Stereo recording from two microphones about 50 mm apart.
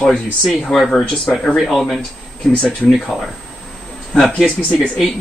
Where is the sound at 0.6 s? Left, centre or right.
Centre.